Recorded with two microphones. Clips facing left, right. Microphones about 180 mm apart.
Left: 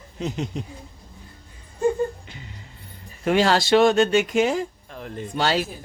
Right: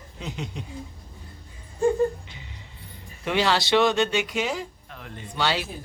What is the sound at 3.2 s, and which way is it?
Speech, 45° left (ahead or behind).